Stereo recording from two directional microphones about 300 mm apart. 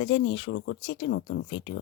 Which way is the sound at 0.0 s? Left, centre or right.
Left.